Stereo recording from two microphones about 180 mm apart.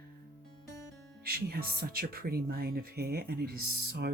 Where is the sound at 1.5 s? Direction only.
55° right (ahead or behind).